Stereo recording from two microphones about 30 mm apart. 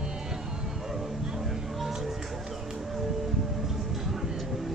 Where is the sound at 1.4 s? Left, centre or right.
Centre.